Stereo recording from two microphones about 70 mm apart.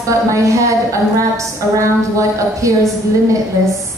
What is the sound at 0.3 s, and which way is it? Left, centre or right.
A woman's voice, right.